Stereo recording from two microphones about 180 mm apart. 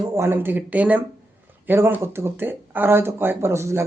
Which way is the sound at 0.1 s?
15° right (ahead or behind).